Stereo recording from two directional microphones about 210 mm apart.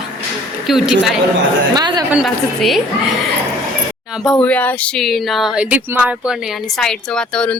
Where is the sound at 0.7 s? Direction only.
5° right (ahead or behind).